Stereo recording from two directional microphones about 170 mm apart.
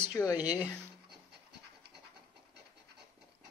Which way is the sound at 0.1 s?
20° left (ahead or behind).